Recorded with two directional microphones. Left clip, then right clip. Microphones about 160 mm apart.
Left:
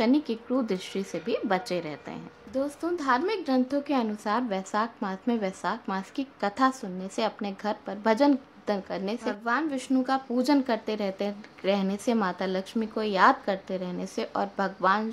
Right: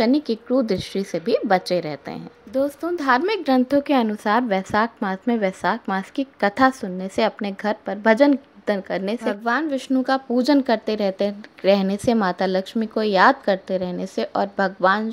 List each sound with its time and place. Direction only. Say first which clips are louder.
0.0 s a woman's voice: right 6 dB; 25° right (ahead or behind)